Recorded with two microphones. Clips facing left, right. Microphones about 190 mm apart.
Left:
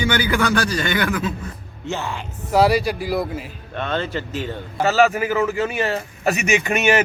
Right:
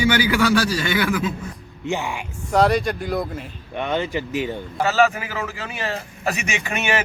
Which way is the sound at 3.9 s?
15° right (ahead or behind).